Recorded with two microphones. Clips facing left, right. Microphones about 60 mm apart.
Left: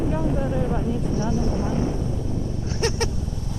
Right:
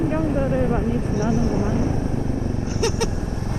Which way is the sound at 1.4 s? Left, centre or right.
Right.